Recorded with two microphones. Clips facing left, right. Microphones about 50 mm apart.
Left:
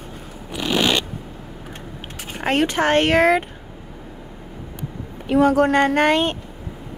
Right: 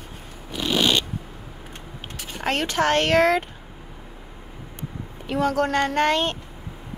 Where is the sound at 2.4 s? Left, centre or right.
Left.